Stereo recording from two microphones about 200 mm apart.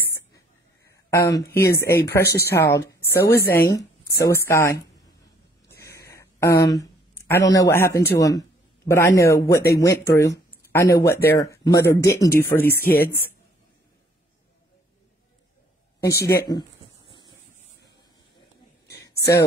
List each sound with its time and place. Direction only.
1.1 s speech: 15° left (ahead or behind)
2.2 s speech: 55° left (ahead or behind)
2.5 s speech: 10° left (ahead or behind)
5.7 s a sound: 15° left (ahead or behind)
8.1 s speech: 15° left (ahead or behind)
16.0 s speech: 15° left (ahead or behind)
18.9 s a sound: 15° left (ahead or behind)